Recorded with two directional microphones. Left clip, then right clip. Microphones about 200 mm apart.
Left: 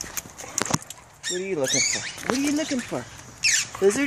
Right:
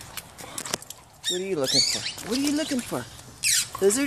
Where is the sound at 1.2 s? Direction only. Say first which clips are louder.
Even; 10° right (ahead or behind).